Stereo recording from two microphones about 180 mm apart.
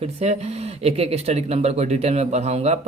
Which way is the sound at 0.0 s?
35° right (ahead or behind).